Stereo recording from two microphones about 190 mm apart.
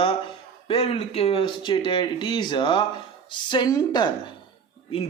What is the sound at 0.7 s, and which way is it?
Speech, 30° left (ahead or behind).